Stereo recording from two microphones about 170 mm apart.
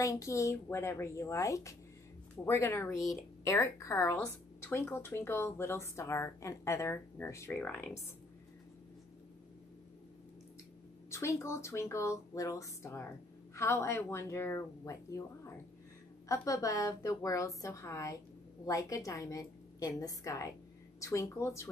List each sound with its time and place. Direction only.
0.0 s speech: 20° left (ahead or behind)
11.1 s a woman's voice: 15° left (ahead or behind)